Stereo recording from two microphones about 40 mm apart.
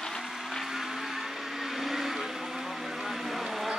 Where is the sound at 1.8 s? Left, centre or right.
Centre.